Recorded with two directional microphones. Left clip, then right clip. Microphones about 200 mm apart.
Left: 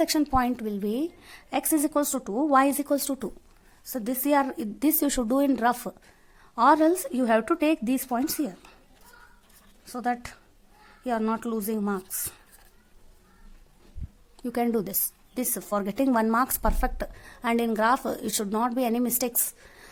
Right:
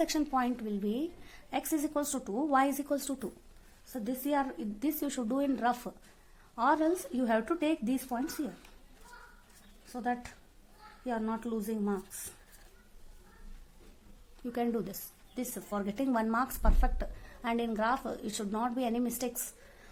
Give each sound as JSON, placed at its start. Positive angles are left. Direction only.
{"t": 0.0, "sound": "speech", "side_deg": 30}
{"t": 3.9, "sound": "speech", "side_deg": 40}
{"t": 9.9, "sound": "a woman's voice", "side_deg": 45}
{"t": 14.4, "sound": "speech", "side_deg": 30}